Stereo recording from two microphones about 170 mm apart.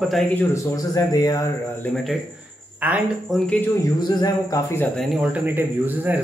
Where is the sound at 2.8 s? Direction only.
10° right (ahead or behind).